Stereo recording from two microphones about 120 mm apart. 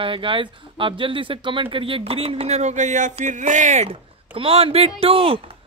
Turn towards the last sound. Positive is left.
turn(degrees=-50)  # may be behind; listen again after turning